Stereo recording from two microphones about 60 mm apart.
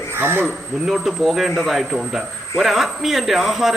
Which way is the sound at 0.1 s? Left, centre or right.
Right.